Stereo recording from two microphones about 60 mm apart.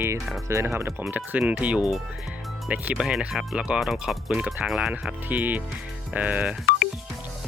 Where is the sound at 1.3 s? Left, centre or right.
Right.